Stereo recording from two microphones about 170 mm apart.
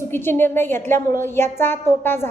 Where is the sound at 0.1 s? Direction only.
15° left (ahead or behind).